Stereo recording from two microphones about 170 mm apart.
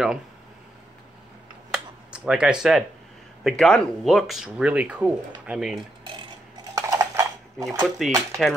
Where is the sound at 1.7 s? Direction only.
5° right (ahead or behind).